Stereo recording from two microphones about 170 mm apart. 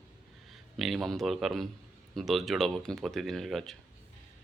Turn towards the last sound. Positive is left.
turn(degrees=0)  # may be behind; listen again after turning